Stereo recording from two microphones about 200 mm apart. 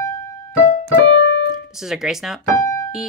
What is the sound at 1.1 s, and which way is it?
Keyboard, 65° left (ahead or behind).